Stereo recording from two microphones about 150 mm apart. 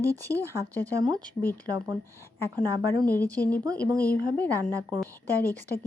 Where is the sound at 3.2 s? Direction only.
10° left (ahead or behind).